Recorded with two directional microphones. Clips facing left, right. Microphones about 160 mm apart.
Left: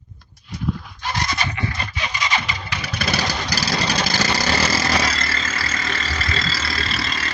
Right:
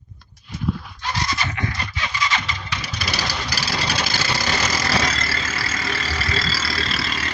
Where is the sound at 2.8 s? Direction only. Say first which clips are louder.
Left 6 dB; 55° left (ahead or behind).